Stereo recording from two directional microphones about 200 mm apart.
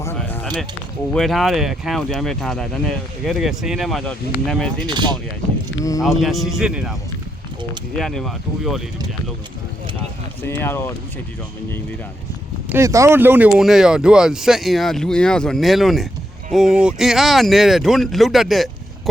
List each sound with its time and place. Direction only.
0.0 s a sound: 10° left (ahead or behind)
1.1 s speech: centre (ahead or behind)
4.9 s speech: 20° right (ahead or behind)
6.0 s speech: centre (ahead or behind)
7.9 s speech: centre (ahead or behind)
10.4 s speech: 10° left (ahead or behind)
12.6 s speech: 15° right (ahead or behind)